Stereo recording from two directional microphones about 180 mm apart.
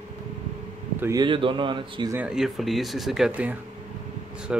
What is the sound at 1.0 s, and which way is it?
Speech, 20° right (ahead or behind).